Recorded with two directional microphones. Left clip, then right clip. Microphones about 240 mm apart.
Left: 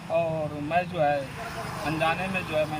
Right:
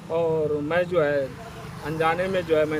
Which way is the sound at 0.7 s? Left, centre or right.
Right.